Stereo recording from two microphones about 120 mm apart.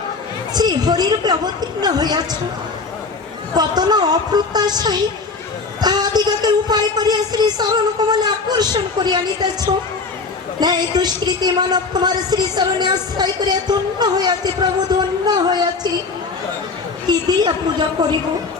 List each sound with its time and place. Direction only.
0.5 s speech: 35° right (ahead or behind)
3.5 s speech: 35° right (ahead or behind)
10.6 s speech: 35° right (ahead or behind)
17.1 s speech: 35° right (ahead or behind)